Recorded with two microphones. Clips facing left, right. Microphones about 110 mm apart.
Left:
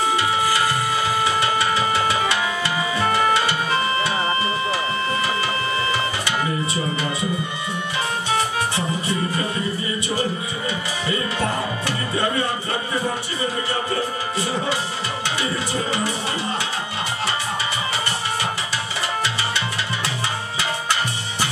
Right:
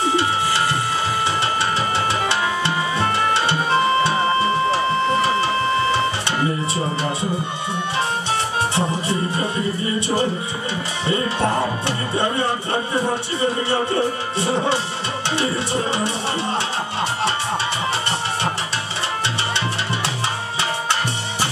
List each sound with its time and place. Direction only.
2.2 s music: 30° right (ahead or behind)
8.7 s music: 30° right (ahead or behind)
15.3 s music: 30° right (ahead or behind)